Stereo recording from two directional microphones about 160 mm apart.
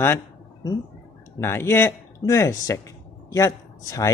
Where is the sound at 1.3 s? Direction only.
15° left (ahead or behind).